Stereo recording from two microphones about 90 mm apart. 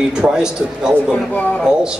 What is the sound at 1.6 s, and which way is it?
Speech, 10° right (ahead or behind).